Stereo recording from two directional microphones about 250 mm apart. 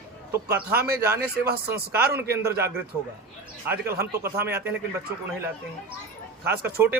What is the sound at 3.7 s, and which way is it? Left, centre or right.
Speech, centre.